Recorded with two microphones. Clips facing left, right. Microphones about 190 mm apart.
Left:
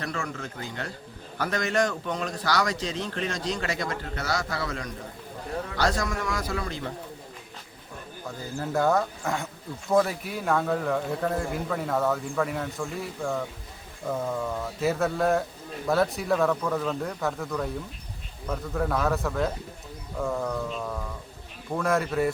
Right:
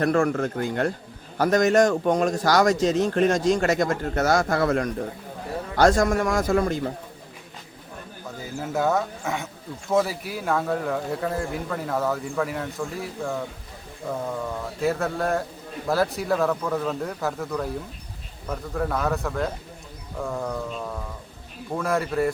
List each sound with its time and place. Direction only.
0.0 s a man's voice: 50° right (ahead or behind)
8.5 s a man's voice: 5° right (ahead or behind)